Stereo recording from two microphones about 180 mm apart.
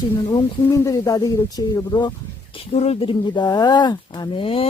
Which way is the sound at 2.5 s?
35° left (ahead or behind).